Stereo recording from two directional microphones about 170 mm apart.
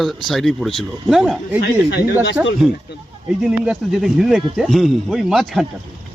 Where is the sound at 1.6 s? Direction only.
80° left.